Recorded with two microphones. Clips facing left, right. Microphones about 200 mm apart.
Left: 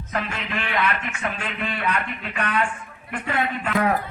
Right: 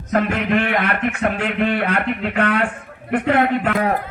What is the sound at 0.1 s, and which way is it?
Speech, 55° right (ahead or behind).